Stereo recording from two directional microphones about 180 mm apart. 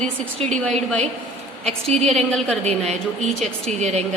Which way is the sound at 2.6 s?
35° right (ahead or behind).